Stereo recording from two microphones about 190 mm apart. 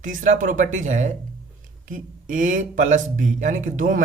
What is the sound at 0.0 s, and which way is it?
Speech, 45° right (ahead or behind).